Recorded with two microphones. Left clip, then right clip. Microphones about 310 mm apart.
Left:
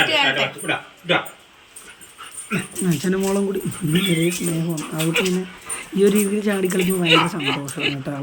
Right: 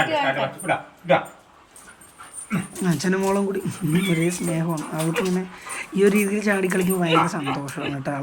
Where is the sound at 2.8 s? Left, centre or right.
Centre.